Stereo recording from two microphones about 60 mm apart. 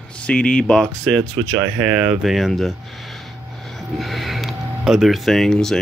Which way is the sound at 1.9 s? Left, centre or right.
Centre.